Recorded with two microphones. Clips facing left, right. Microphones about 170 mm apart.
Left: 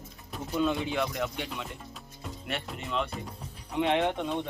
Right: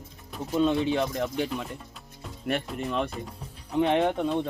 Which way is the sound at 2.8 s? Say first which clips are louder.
Even; 45° right (ahead or behind).